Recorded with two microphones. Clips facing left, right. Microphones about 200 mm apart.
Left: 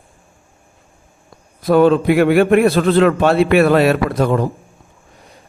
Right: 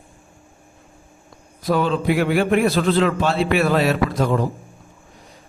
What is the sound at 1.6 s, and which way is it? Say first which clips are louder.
A man's voice: left 8 dB; 55° left (ahead or behind).